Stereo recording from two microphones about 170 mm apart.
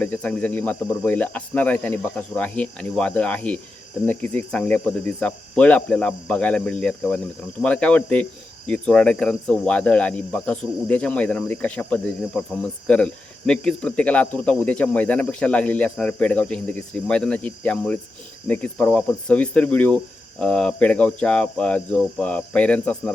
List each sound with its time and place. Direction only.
0.0 s speech: 10° left (ahead or behind)